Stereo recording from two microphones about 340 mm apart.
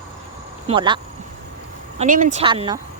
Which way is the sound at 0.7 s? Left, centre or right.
Centre.